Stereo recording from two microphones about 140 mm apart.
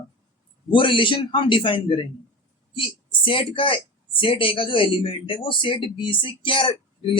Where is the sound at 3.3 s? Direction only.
40° left (ahead or behind).